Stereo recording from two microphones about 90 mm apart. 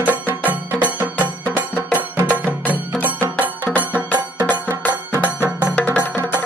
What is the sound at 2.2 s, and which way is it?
Music, 15° right (ahead or behind).